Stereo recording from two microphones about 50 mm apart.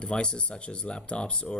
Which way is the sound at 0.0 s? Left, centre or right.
Centre.